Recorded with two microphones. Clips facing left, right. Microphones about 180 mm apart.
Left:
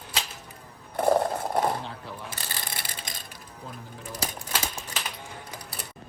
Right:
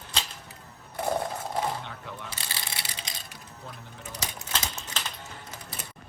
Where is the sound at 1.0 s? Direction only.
55° left (ahead or behind).